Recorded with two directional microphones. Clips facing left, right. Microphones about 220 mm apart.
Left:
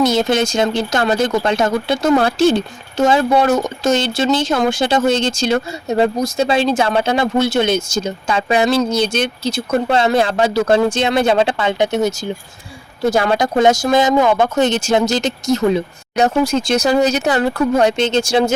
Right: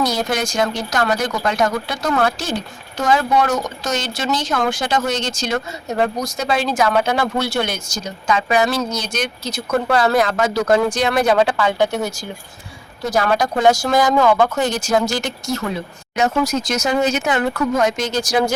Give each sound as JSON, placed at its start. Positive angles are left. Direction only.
{"t": 0.0, "sound": "speech", "side_deg": 25}
{"t": 16.1, "sound": "speech", "side_deg": 30}